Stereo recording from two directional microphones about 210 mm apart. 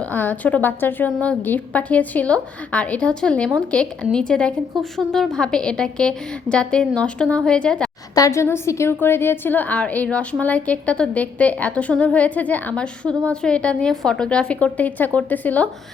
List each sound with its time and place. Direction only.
0.0 s a woman's voice: 10° left (ahead or behind)
8.1 s a woman's voice: 15° left (ahead or behind)